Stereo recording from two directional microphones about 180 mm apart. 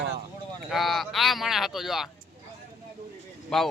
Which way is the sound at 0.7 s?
Centre (ahead or behind).